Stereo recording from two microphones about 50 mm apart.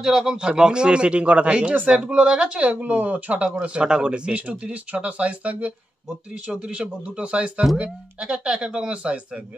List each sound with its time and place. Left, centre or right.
0.0 s speech: centre
2.7 s speech: right
6.5 s speech: centre